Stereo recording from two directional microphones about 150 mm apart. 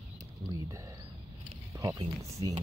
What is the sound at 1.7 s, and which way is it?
Speech, 20° right (ahead or behind).